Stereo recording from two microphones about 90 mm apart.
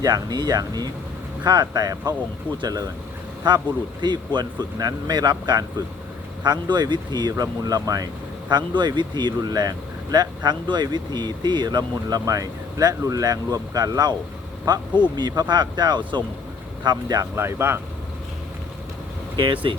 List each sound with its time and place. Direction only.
0.0 s speech: 45° right (ahead or behind)
3.4 s speech: 60° right (ahead or behind)
17.3 s speech: 25° right (ahead or behind)
19.4 s speech: 60° right (ahead or behind)